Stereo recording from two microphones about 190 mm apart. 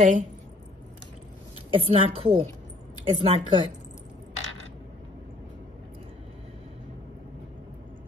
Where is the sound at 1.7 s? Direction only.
30° right (ahead or behind).